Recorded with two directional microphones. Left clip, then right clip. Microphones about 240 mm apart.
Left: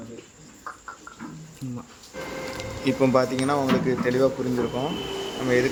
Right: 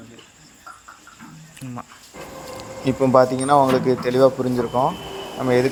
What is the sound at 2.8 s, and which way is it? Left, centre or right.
Speech, right.